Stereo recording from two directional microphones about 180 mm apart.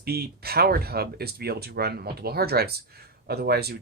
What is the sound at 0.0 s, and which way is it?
Speech, 60° right (ahead or behind).